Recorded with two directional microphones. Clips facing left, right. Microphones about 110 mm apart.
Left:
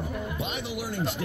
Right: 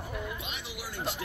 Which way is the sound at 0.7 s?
55° left (ahead or behind).